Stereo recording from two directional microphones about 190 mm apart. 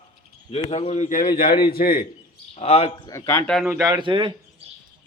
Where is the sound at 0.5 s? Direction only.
30° left (ahead or behind); by 2.0 s 50° left (ahead or behind).